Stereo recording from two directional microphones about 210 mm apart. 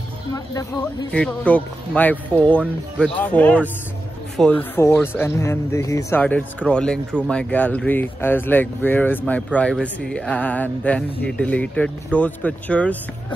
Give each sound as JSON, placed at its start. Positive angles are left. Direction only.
{"t": 0.3, "sound": "speech", "side_deg": 15}
{"t": 1.1, "sound": "speech", "side_deg": 5}